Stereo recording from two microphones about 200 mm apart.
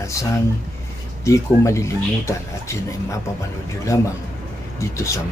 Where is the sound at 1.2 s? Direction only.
15° left (ahead or behind).